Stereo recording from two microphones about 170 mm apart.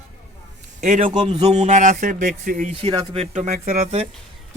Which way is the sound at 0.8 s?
50° right (ahead or behind).